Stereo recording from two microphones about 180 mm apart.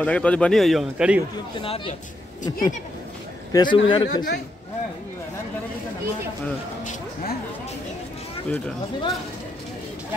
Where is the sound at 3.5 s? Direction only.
25° left (ahead or behind).